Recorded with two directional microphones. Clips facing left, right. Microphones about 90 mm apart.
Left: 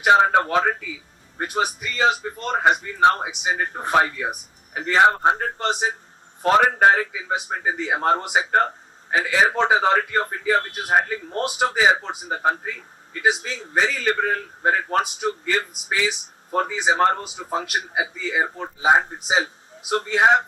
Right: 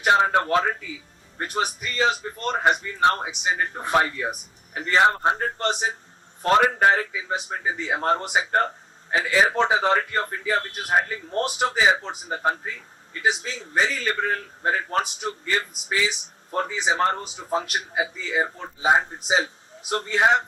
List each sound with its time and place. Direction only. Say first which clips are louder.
0.0 s a man's voice: left 3 dB; 45° left (ahead or behind)